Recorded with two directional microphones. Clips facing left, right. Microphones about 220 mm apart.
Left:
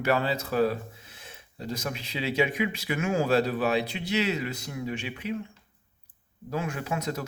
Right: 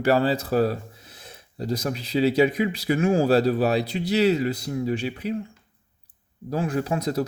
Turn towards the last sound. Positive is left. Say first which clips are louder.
# right 7 dB
turn(degrees=-35)  # may be behind; listen again after turning